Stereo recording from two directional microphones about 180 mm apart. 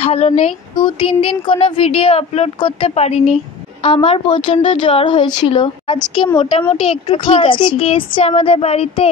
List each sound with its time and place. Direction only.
0.0 s a woman's voice: 35° left (ahead or behind)